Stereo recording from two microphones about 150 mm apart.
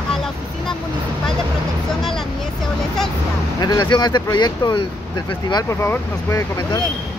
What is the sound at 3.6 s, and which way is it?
Speech, 25° left (ahead or behind).